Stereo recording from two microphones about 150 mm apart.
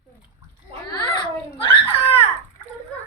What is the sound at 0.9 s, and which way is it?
Giggle, 30° left (ahead or behind).